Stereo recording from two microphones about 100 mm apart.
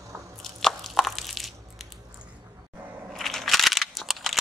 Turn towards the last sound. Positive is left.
turn(degrees=0)  # may be behind; listen again after turning